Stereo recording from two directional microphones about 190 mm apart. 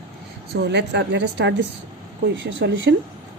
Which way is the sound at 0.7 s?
65° right (ahead or behind).